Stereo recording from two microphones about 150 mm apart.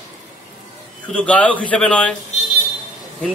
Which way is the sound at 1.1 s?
10° left (ahead or behind).